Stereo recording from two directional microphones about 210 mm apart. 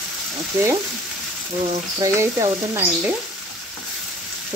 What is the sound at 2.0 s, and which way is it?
Frying, 15° right (ahead or behind).